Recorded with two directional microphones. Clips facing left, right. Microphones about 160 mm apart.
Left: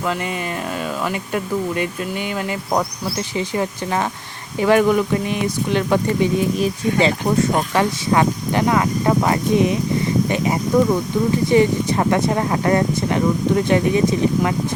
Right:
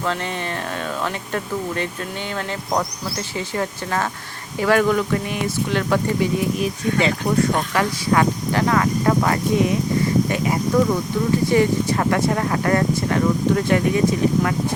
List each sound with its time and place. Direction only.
1.0 s speech: 10° left (ahead or behind)
3.3 s speech: 15° left (ahead or behind)
6.6 s speech: 30° left (ahead or behind)